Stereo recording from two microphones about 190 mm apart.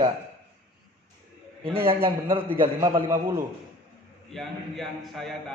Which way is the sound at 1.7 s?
30° right (ahead or behind).